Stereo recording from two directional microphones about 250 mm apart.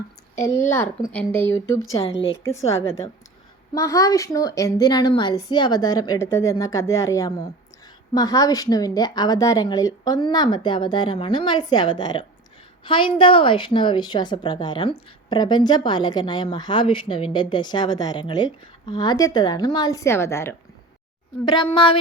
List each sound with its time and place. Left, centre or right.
0.3 s a woman's voice: centre
1.9 s a woman's voice: left
2.4 s a woman's voice: centre
3.8 s a woman's voice: centre